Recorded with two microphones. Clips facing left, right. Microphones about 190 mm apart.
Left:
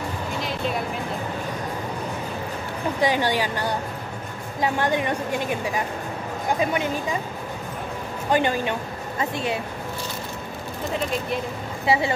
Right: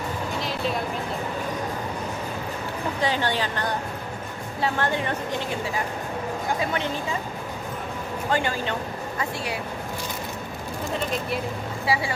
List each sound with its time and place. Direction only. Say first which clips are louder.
3.0 s a woman's voice: left 4 dB; 15° left (ahead or behind)
6.6 s a woman's voice: left 3 dB; 15° left (ahead or behind)
8.3 s a woman's voice: left 4 dB; 20° left (ahead or behind)
11.8 s a woman's voice: left 4 dB; 25° left (ahead or behind)